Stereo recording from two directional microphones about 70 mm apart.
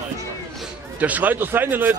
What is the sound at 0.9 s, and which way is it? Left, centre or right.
Speech, right.